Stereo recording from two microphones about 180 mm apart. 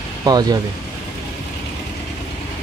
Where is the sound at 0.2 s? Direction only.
20° right (ahead or behind).